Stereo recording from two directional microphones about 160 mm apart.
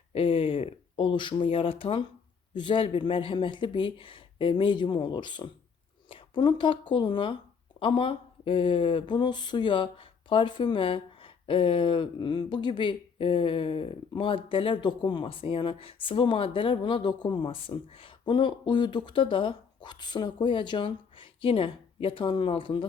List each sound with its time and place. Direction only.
0.1 s speech: 35° left (ahead or behind)